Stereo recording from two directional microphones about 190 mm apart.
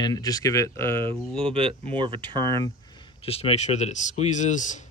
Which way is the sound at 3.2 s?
30° left (ahead or behind).